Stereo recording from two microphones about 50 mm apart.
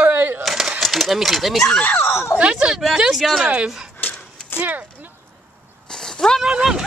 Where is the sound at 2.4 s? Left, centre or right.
Right.